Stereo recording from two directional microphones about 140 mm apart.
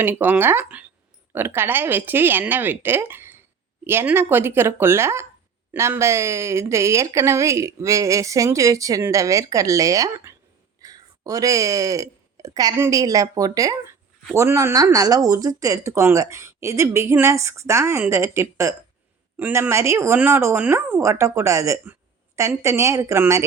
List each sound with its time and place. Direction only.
0.0 s a woman's voice: 15° right (ahead or behind)